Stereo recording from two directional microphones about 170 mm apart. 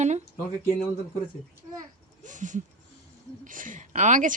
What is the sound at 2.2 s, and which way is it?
A woman's voice, 45° right (ahead or behind).